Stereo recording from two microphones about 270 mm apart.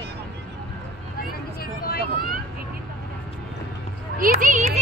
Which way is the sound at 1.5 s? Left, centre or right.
Left.